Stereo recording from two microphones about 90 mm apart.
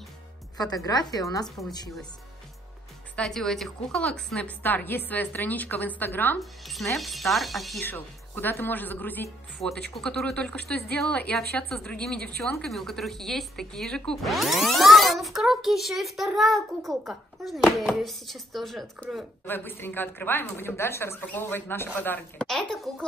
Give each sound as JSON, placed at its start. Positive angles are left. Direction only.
{"t": 0.6, "sound": "a woman's voice", "side_deg": 45}
{"t": 3.2, "sound": "a woman's voice", "side_deg": 5}
{"t": 6.6, "sound": "a woman's voice", "side_deg": 0}
{"t": 7.8, "sound": "a woman's voice", "side_deg": 20}
{"t": 9.6, "sound": "a woman's voice", "side_deg": 5}
{"t": 19.4, "sound": "a woman's voice", "side_deg": 25}
{"t": 22.7, "sound": "a child's voice", "side_deg": 5}